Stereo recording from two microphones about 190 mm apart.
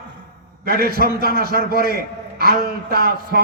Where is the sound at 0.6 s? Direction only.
55° right (ahead or behind).